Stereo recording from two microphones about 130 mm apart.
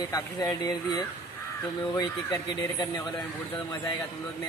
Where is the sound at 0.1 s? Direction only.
30° left (ahead or behind).